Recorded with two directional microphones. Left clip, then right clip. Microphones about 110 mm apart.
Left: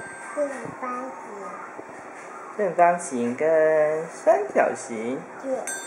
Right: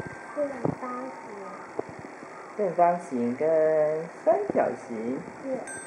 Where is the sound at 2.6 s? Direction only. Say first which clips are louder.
Left 3 dB; 30° left (ahead or behind).